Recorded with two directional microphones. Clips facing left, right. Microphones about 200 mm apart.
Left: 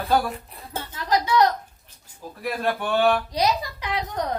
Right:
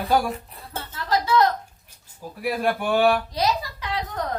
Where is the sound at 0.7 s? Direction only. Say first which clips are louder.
Left 1 dB; 15° left (ahead or behind).